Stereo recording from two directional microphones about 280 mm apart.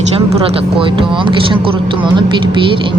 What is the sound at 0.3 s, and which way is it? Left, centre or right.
Speech, centre.